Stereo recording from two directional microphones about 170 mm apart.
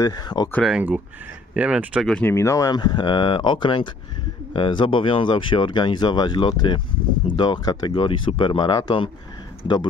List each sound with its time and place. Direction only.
0.0 s speech: 25° left (ahead or behind)
0.5 s speech: 5° left (ahead or behind)
0.7 s speech: 5° right (ahead or behind)
2.3 s speech: 20° left (ahead or behind)